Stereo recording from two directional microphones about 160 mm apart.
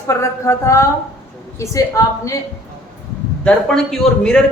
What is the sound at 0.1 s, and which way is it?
A woman's voice, 15° left (ahead or behind).